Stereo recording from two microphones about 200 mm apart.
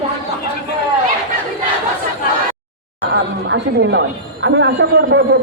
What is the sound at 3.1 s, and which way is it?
A woman's voice, 60° right (ahead or behind).